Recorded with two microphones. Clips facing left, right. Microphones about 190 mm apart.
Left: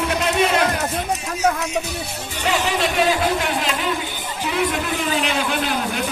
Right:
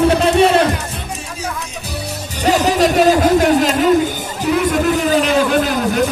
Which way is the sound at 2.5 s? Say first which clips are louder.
Right 8 dB; 40° right (ahead or behind).